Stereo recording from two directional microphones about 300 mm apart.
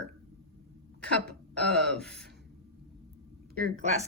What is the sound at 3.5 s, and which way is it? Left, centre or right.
Speech, right.